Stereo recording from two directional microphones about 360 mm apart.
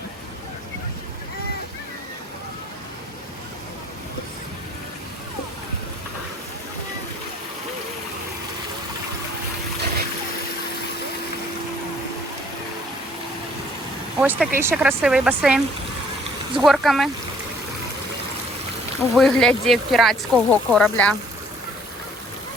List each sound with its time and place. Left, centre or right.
14.2 s speech: centre
19.1 s speech: centre